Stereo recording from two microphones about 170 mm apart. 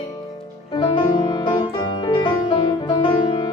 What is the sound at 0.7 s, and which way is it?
Music, 25° left (ahead or behind).